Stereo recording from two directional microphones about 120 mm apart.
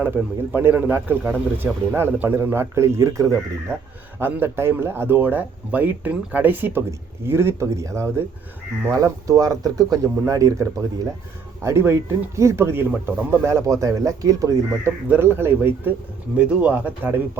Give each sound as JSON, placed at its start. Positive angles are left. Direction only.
{"t": 0.5, "sound": "a man's voice", "side_deg": -15}